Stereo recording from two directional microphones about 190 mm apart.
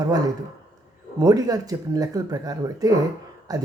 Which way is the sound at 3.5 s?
20° right (ahead or behind).